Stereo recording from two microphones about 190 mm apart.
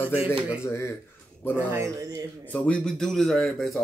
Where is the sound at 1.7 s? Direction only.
15° right (ahead or behind).